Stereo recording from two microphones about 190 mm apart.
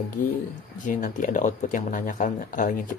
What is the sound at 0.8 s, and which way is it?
Speech, 45° left (ahead or behind).